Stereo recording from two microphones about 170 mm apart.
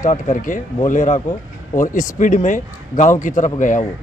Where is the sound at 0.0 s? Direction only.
50° left (ahead or behind).